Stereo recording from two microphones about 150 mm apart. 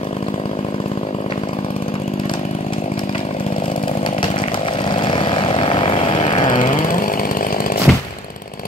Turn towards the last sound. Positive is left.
turn(degrees=70)  # may be behind; listen again after turning